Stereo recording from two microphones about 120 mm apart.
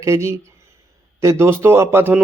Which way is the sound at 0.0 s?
25° right (ahead or behind).